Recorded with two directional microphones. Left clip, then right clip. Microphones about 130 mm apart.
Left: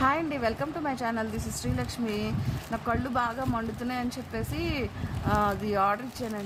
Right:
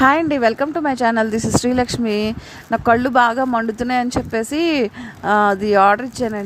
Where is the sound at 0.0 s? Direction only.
70° right (ahead or behind).